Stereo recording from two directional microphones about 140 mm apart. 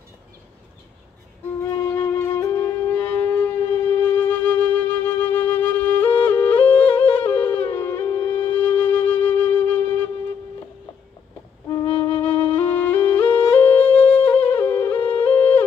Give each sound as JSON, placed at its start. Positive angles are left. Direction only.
{"t": 1.8, "sound": "wind instrument", "side_deg": 15}
{"t": 12.3, "sound": "flute", "side_deg": 40}
{"t": 12.5, "sound": "music", "side_deg": 15}